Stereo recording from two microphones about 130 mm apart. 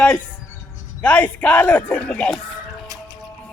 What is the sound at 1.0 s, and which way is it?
Speech, 10° left (ahead or behind).